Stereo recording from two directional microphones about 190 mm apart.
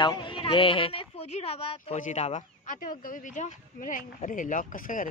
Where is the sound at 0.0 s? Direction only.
25° left (ahead or behind).